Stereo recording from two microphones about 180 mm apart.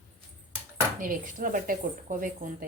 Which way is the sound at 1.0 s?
50° right (ahead or behind).